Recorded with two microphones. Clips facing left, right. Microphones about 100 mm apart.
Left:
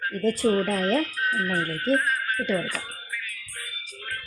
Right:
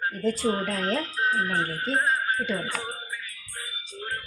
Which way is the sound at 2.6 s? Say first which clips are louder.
Even; 25° right (ahead or behind).